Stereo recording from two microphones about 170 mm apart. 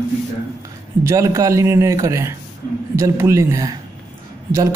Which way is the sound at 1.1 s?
20° right (ahead or behind).